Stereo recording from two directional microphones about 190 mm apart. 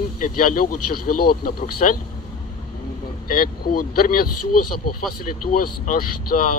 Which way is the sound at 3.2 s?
50° left (ahead or behind).